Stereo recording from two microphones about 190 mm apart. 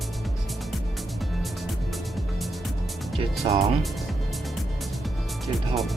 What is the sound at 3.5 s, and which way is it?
Speech, 25° right (ahead or behind).